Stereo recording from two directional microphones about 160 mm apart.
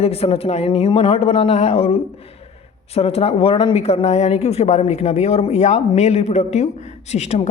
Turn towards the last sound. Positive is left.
turn(degrees=40)  # may be behind; listen again after turning